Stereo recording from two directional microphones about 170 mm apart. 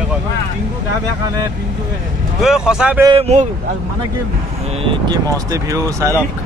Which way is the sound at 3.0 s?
35° right (ahead or behind).